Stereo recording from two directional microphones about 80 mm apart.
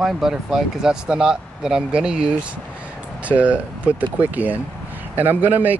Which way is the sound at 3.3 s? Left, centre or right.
Centre.